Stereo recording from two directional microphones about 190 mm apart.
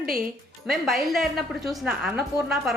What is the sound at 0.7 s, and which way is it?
A woman's voice, centre (ahead or behind).